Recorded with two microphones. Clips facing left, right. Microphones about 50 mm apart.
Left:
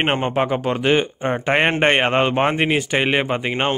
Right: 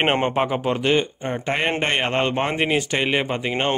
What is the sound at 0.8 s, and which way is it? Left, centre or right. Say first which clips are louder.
Speech: left 2 dB; left.